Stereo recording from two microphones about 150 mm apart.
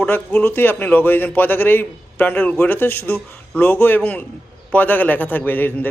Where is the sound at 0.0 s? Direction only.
10° left (ahead or behind).